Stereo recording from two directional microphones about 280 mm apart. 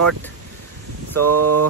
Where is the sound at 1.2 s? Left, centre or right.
Right.